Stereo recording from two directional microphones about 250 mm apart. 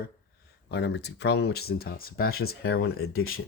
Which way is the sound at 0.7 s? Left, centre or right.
Left.